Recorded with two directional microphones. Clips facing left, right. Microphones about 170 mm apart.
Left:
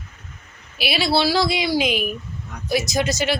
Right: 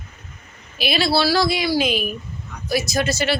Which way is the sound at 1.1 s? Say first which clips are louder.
Left 1 dB; 20° left (ahead or behind).